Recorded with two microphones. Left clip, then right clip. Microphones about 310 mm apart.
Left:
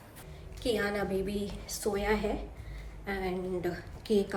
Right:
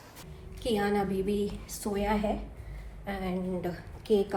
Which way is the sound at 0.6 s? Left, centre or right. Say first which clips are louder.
Right 2 dB; centre.